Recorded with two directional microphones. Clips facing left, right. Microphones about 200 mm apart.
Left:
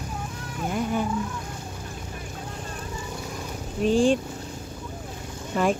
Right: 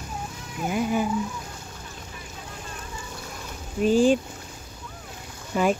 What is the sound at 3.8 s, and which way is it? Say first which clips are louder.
Speech: right 1 dB; 5° right (ahead or behind).